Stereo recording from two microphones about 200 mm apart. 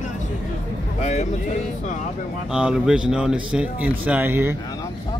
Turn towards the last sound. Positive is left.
turn(degrees=-10)  # may be behind; listen again after turning